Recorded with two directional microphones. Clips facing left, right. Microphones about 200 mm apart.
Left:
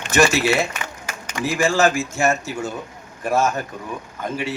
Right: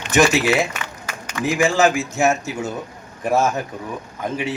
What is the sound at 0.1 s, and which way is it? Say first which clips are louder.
Speech: right 1 dB; 15° right (ahead or behind).